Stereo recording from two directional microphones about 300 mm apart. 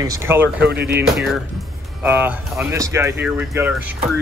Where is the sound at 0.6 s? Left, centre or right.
Right.